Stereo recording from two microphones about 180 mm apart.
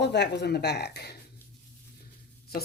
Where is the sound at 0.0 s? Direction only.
70° left (ahead or behind).